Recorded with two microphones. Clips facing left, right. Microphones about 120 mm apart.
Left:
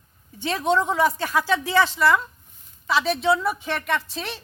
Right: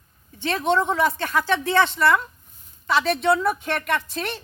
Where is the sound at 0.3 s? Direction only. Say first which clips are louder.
Even; 10° left (ahead or behind).